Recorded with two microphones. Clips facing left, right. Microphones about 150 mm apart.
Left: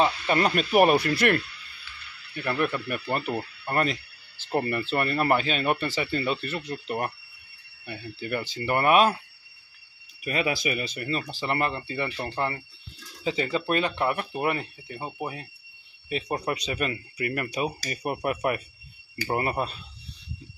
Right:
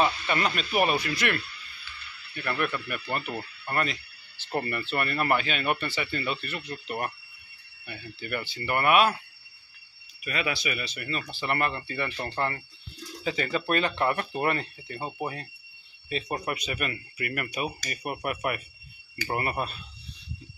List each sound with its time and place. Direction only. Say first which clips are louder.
0.0 s speech: left 3 dB; 35° left (ahead or behind)
2.4 s speech: left 3 dB; 20° left (ahead or behind)
2.9 s speech: left 4 dB; 35° left (ahead or behind)
4.5 s speech: left 4 dB; 25° left (ahead or behind)
10.2 s speech: left 4 dB; 30° left (ahead or behind); by 16.4 s 15° left (ahead or behind)
16.4 s speech: left 3 dB; 30° left (ahead or behind)